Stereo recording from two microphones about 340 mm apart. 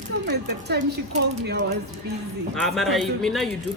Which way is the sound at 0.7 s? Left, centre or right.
Right.